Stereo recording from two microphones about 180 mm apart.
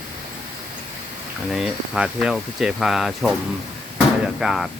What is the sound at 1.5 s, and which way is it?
Speech, 5° right (ahead or behind).